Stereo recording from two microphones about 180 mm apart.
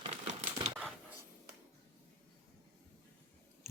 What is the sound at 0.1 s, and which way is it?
Typewriter, 40° right (ahead or behind).